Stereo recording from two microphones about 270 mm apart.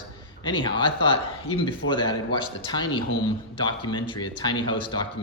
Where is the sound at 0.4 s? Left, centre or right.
Centre.